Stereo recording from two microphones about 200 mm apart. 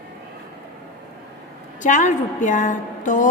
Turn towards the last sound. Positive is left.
turn(degrees=40)  # may be behind; listen again after turning